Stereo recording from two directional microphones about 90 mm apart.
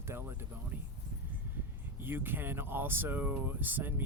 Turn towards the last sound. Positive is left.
turn(degrees=-20)  # may be behind; listen again after turning